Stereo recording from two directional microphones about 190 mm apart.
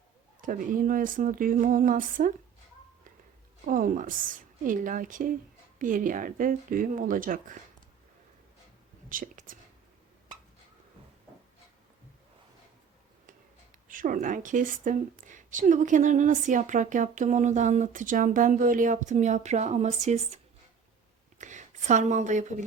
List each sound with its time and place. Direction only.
0.4 s speech: 45° right (ahead or behind)
3.7 s speech: 45° right (ahead or behind)
9.0 s speech: 45° right (ahead or behind)
13.8 s a woman's voice: 45° right (ahead or behind)